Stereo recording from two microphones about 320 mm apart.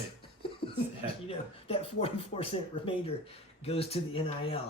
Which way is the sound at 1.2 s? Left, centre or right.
Centre.